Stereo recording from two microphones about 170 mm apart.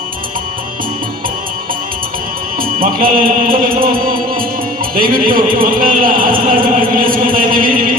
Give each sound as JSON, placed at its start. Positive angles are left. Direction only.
{"t": 2.6, "sound": "a man's voice", "side_deg": -55}
{"t": 4.9, "sound": "a man's voice", "side_deg": -55}